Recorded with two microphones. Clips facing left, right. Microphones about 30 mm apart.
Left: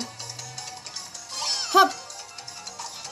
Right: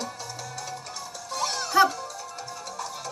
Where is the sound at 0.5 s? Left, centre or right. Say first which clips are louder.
Right 3 dB; left.